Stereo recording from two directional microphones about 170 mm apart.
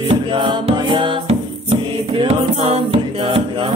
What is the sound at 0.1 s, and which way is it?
Music, 30° right (ahead or behind).